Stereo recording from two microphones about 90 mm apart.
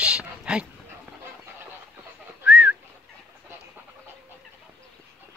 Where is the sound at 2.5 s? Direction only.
10° right (ahead or behind).